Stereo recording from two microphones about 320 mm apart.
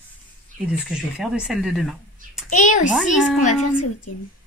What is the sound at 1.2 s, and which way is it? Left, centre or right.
Speech, centre.